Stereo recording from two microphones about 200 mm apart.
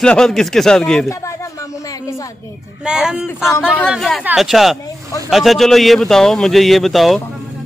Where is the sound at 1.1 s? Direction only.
15° left (ahead or behind).